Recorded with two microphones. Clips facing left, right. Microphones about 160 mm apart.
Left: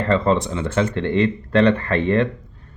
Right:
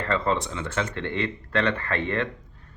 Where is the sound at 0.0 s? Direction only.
25° left (ahead or behind).